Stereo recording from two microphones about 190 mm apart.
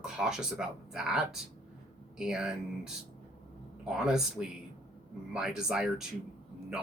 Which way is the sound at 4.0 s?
5° right (ahead or behind).